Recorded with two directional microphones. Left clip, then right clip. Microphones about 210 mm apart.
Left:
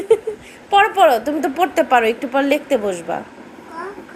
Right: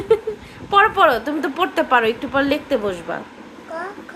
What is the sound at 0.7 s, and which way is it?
A woman's voice, 5° right (ahead or behind).